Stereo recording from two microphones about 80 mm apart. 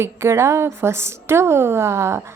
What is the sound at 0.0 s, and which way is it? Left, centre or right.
A woman's voice, right.